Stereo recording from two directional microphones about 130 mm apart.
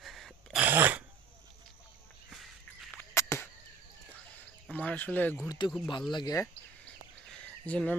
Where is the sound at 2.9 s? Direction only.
20° left (ahead or behind).